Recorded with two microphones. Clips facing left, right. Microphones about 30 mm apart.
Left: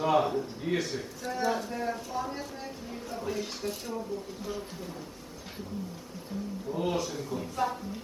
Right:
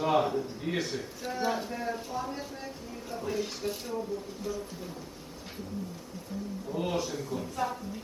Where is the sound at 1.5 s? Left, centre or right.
Centre.